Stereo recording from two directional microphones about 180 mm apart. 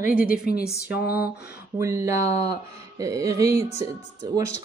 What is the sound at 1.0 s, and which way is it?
Speech, 10° right (ahead or behind).